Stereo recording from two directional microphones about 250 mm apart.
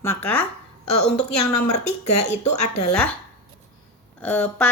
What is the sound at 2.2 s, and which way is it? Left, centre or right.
Speech, left.